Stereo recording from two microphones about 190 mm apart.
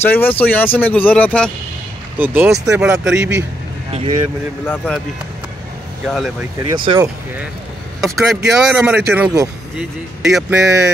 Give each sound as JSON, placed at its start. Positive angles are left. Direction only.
{"t": 0.0, "sound": "speech", "side_deg": 10}
{"t": 2.1, "sound": "speech", "side_deg": -10}
{"t": 4.6, "sound": "speech", "side_deg": 5}
{"t": 6.0, "sound": "speech", "side_deg": 0}
{"t": 6.7, "sound": "speech", "side_deg": -25}
{"t": 8.0, "sound": "speech", "side_deg": 0}